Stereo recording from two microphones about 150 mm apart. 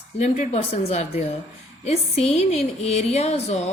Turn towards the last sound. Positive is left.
turn(degrees=45)  # may be behind; listen again after turning